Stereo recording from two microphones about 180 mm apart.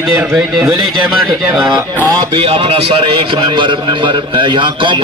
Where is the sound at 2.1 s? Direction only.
30° right (ahead or behind).